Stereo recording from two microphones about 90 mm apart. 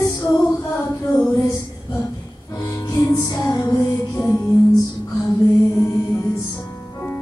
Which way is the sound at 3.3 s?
35° left (ahead or behind).